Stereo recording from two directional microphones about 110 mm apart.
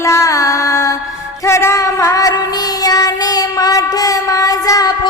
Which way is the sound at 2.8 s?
35° left (ahead or behind).